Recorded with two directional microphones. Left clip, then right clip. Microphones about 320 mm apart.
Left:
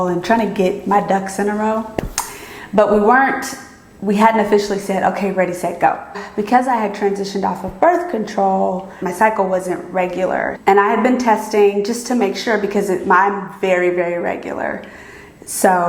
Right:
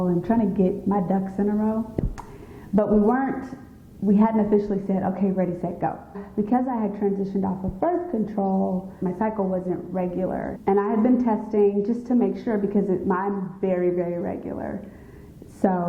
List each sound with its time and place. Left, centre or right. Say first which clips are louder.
0.0 s a woman's voice: left 8 dB; centre
8.4 s a woman's voice: left 10 dB; centre